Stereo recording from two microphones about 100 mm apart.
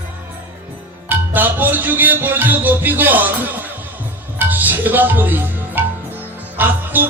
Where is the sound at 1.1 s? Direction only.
20° right (ahead or behind).